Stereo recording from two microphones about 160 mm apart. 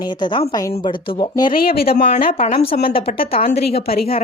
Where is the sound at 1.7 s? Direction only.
70° left (ahead or behind).